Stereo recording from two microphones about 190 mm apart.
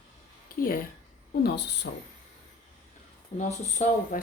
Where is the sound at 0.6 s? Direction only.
50° left (ahead or behind).